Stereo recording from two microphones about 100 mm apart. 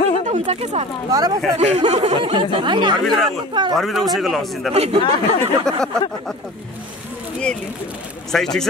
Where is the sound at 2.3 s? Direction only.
50° right (ahead or behind).